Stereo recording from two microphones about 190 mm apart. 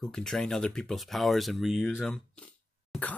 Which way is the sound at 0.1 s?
5° left (ahead or behind).